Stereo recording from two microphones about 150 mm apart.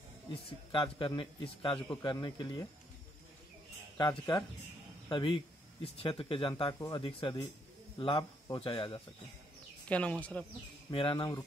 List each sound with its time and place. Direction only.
0.3 s speech: 35° left (ahead or behind)
4.0 s speech: 30° left (ahead or behind)
9.8 s a man's voice: 10° left (ahead or behind)
10.9 s speech: 35° left (ahead or behind)